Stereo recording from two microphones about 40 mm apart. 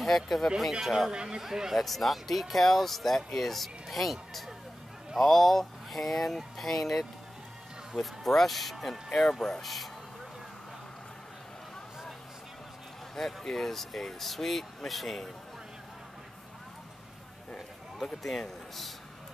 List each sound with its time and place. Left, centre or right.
0.0 s speech: centre
1.1 s speech: centre
1.8 s speech: centre
13.1 s speech: centre
17.6 s a man's voice: centre